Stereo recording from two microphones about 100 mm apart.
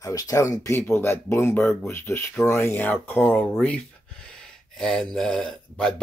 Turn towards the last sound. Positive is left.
turn(degrees=5)  # may be behind; listen again after turning